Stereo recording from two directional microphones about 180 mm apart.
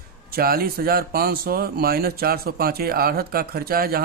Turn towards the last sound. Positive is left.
turn(degrees=-55)  # may be behind; listen again after turning